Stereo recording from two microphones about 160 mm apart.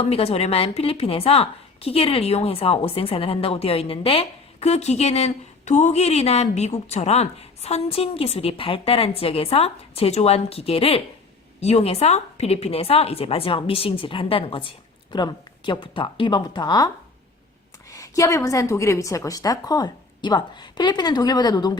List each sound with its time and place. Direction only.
0.0 s a woman's voice: 40° left (ahead or behind)
17.9 s a woman's voice: 20° left (ahead or behind)